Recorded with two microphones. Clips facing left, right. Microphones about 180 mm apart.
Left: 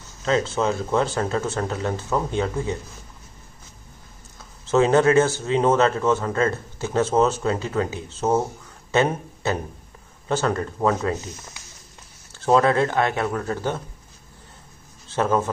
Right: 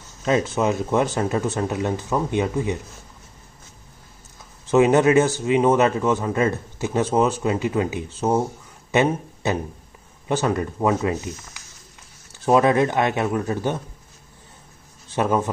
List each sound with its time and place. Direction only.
0.2 s speech: 15° right (ahead or behind)
4.6 s speech: 15° right (ahead or behind)
12.4 s speech: 15° right (ahead or behind)
15.0 s a man's voice: 15° right (ahead or behind)